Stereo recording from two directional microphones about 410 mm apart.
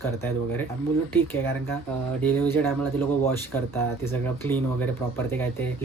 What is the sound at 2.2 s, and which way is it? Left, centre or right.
Speech, centre.